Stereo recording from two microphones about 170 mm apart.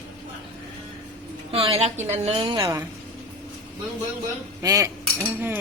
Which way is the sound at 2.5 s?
20° right (ahead or behind).